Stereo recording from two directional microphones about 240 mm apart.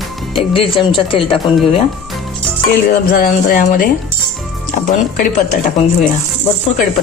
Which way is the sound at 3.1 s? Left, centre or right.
Left.